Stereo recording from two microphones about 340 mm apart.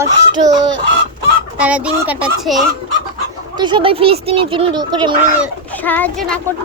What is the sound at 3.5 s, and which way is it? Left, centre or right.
Speech, centre.